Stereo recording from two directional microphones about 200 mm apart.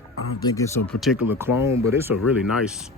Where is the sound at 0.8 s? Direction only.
Centre (ahead or behind).